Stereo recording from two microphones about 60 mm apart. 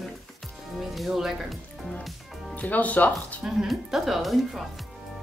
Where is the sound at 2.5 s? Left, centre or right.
Left.